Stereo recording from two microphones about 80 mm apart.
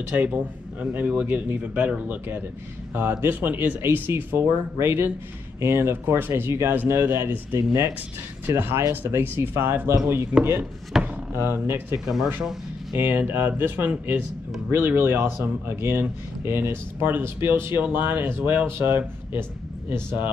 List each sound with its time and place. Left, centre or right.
0.1 s a man's voice: centre
10.9 s a sound: centre
11.3 s a man's voice: right